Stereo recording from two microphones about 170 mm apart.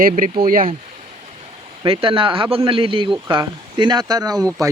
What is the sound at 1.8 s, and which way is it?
Speech, 30° right (ahead or behind).